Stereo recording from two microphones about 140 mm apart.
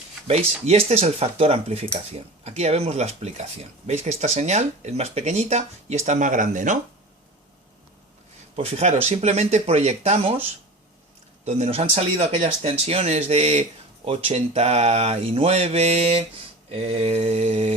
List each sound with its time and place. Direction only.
0.3 s speech: 50° right (ahead or behind); by 6.7 s 65° right (ahead or behind)
8.5 s speech: 50° right (ahead or behind)
11.4 s speech: 50° right (ahead or behind)